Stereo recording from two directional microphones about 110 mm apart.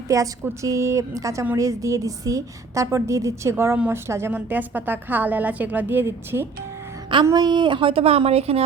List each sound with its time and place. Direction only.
0.1 s a woman's voice: 30° right (ahead or behind)
7.3 s speech: 40° right (ahead or behind); by 8.6 s 65° right (ahead or behind)